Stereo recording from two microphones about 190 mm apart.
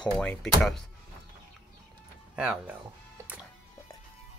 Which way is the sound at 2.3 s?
5° right (ahead or behind).